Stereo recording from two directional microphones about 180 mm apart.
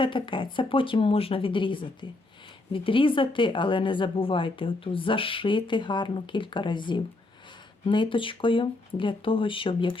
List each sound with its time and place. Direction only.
0.0 s a woman's voice: 25° left (ahead or behind)